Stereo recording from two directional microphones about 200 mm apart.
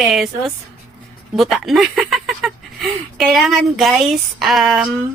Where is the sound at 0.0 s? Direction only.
Centre (ahead or behind).